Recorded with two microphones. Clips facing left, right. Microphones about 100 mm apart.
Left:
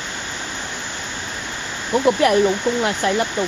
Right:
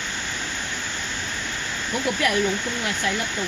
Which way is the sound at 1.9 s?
45° left (ahead or behind).